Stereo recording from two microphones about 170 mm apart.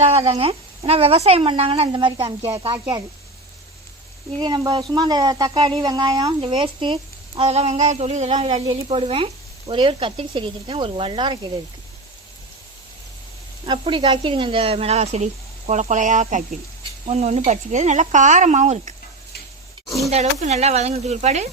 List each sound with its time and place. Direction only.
0.0 s speech: 35° right (ahead or behind)
4.4 s speech: 25° right (ahead or behind)
13.7 s speech: 30° right (ahead or behind)
20.1 s speech: 40° right (ahead or behind)